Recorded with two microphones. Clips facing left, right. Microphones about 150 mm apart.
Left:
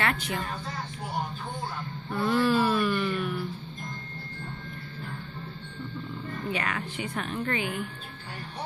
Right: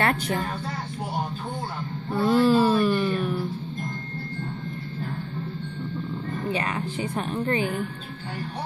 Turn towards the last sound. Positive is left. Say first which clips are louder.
# right 5 dB
turn(degrees=-35)  # may be behind; listen again after turning